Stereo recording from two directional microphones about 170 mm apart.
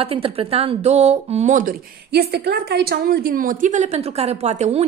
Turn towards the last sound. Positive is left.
turn(degrees=-40)  # may be behind; listen again after turning